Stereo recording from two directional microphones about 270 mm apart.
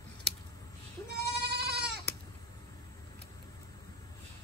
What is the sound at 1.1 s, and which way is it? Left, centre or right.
Sheep, right.